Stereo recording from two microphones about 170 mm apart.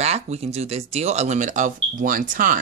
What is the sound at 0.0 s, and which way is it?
Speech, 40° right (ahead or behind).